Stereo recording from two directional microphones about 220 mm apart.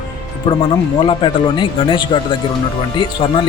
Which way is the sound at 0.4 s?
20° left (ahead or behind).